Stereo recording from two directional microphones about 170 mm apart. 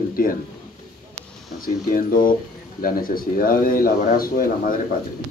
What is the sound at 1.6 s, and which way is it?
Speech, 55° left (ahead or behind).